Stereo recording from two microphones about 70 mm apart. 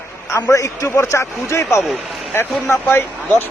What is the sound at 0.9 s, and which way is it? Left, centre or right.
Speech, left.